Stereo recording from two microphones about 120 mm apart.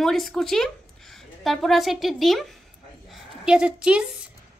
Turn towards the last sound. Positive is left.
turn(degrees=-5)  # may be behind; listen again after turning